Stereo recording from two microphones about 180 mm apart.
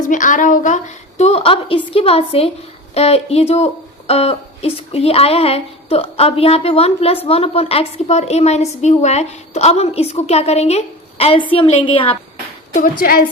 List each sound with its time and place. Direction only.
0.0 s a woman's voice: 45° left (ahead or behind)
1.2 s a woman's voice: 35° left (ahead or behind)
12.7 s a woman's voice: 50° left (ahead or behind)